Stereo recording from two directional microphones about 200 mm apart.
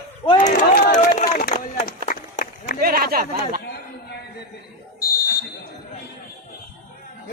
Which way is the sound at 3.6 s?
55° left (ahead or behind).